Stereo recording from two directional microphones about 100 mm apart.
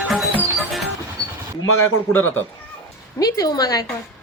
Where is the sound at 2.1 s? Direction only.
20° left (ahead or behind).